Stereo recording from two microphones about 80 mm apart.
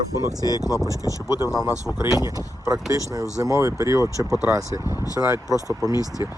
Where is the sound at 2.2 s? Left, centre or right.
Right.